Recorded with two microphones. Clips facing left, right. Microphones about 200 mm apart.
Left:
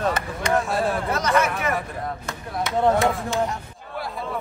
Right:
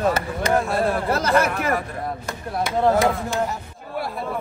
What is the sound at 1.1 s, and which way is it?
Speech, 30° right (ahead or behind).